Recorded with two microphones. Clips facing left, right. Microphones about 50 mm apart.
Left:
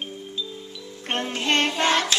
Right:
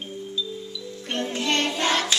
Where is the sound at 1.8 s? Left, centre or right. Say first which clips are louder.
Left 2 dB; centre.